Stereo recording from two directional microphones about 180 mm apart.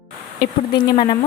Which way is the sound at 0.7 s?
25° left (ahead or behind).